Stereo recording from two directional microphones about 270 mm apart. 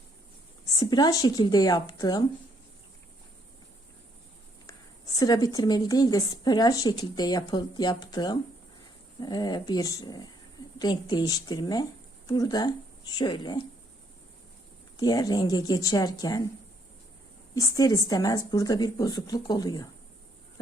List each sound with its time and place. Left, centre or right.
0.8 s a woman's voice: centre
5.1 s a woman's voice: centre
14.9 s a woman's voice: centre
17.5 s a woman's voice: centre